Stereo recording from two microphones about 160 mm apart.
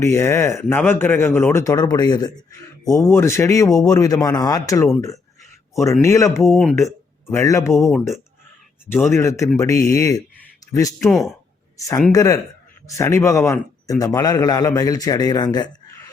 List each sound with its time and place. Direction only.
0.0 s a man's voice: 15° left (ahead or behind)
7.9 s speech: centre (ahead or behind)
8.9 s a man's voice: 15° left (ahead or behind)
11.1 s speech: centre (ahead or behind)
12.1 s a man's voice: 20° left (ahead or behind)